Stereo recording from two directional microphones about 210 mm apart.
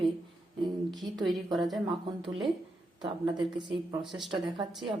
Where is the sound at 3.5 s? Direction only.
20° right (ahead or behind).